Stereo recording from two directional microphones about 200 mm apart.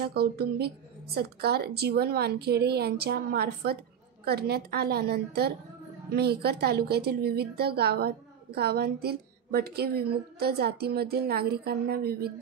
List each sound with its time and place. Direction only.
0.0 s a woman's voice: 50° right (ahead or behind)